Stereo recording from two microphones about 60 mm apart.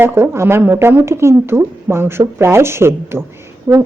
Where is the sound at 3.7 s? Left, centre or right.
Right.